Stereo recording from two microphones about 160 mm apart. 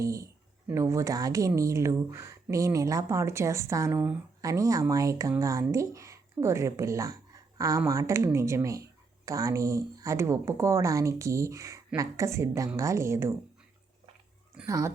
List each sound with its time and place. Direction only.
0.0 s speech: 20° right (ahead or behind)